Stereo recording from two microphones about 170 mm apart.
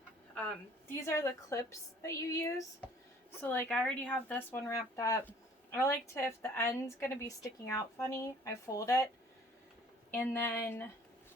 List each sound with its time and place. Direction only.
0.9 s a woman's voice: 15° left (ahead or behind)
10.1 s a woman's voice: 10° left (ahead or behind)